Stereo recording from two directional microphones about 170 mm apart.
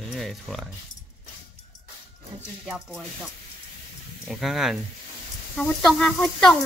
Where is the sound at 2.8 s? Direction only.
Centre (ahead or behind).